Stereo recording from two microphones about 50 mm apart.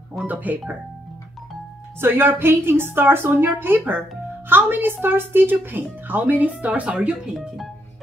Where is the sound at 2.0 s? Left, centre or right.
Right.